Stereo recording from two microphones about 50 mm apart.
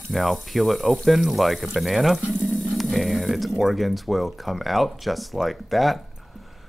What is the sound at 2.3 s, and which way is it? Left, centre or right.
Roaring cats, left.